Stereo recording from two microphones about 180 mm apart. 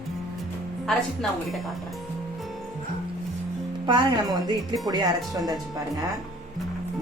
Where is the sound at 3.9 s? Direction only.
25° right (ahead or behind).